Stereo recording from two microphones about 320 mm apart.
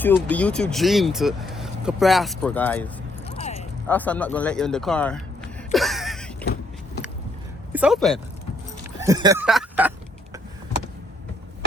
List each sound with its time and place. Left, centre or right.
0.0 s speech: centre
3.2 s a sound: centre
3.8 s speech: centre
6.4 s vehicle: left
7.7 s speech: centre
9.0 s speech: centre